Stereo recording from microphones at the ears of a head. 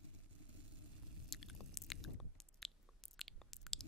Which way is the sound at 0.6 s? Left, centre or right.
Left.